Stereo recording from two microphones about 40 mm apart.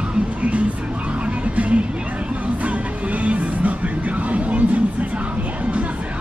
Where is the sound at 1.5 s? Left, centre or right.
Right.